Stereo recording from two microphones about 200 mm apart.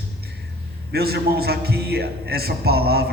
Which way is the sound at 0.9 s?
50° right (ahead or behind).